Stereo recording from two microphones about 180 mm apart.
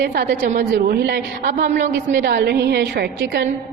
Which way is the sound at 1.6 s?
45° right (ahead or behind).